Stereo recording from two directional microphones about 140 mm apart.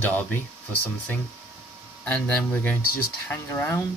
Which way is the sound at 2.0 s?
10° left (ahead or behind).